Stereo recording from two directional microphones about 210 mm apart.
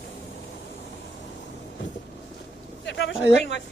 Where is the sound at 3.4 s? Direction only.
60° left (ahead or behind).